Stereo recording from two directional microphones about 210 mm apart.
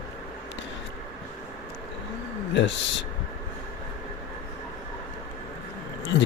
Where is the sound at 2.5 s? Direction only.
60° left (ahead or behind).